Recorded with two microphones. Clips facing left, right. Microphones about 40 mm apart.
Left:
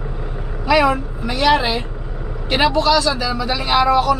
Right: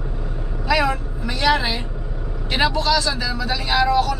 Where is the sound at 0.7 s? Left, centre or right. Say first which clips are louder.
Left 5 dB; centre.